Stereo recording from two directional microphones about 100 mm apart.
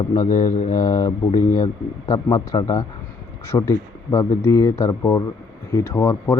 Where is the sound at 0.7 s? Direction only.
35° left (ahead or behind).